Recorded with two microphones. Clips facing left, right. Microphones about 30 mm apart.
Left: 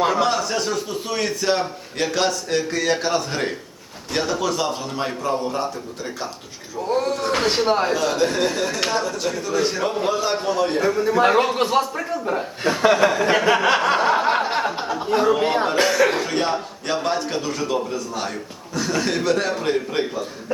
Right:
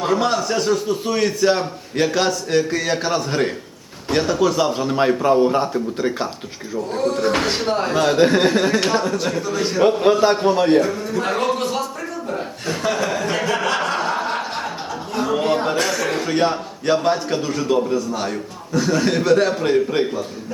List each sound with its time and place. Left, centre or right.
0.1 s a man's voice: centre
5.2 s speech: right
7.2 s speech: centre
7.4 s a man's voice: centre
7.9 s speech: right
8.8 s a man's voice: centre
9.8 s speech: right
10.8 s speech: centre
11.0 s speech: left
13.7 s chuckle: centre
15.3 s speech: centre
16.2 s a man's voice: centre